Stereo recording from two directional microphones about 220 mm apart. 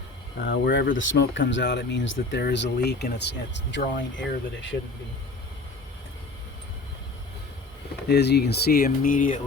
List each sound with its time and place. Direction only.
0.4 s speech: 50° left (ahead or behind)
8.0 s speech: 50° left (ahead or behind)